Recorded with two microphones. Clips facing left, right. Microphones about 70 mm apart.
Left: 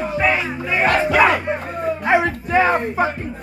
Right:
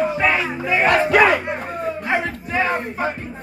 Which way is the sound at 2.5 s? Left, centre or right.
Left.